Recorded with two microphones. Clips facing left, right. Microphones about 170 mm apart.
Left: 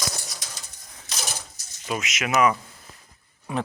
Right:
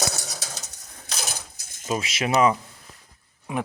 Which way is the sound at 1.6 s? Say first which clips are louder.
Right 3 dB; 50° right (ahead or behind).